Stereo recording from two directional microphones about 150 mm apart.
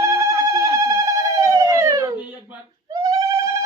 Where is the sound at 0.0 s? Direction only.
20° right (ahead or behind).